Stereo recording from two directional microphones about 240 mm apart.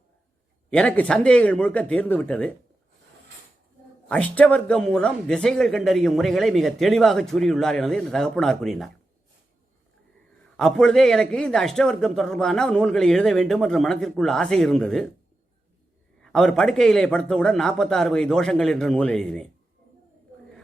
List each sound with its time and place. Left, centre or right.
0.7 s a man's voice: centre
4.1 s a man's voice: centre
10.6 s a man's voice: centre
16.2 s a man's voice: centre